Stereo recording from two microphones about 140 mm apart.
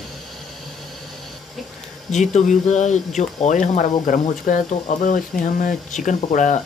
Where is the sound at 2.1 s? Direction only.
60° left (ahead or behind).